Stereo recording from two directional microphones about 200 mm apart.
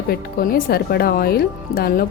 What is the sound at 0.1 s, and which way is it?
Speech, 50° left (ahead or behind).